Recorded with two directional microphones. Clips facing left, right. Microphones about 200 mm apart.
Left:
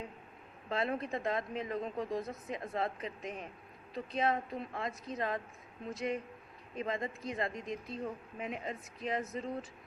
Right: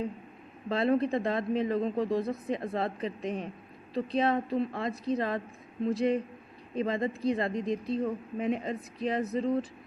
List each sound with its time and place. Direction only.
0.7 s speech: 35° right (ahead or behind)